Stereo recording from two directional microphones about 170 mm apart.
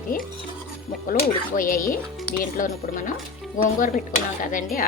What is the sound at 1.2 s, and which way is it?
A woman's voice, 55° left (ahead or behind).